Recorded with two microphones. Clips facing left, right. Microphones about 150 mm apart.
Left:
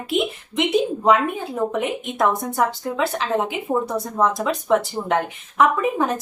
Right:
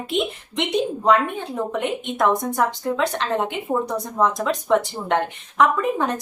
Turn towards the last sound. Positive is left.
turn(degrees=5)  # may be behind; listen again after turning